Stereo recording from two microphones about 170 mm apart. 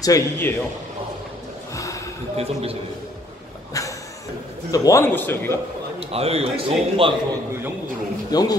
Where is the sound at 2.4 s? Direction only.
35° right (ahead or behind).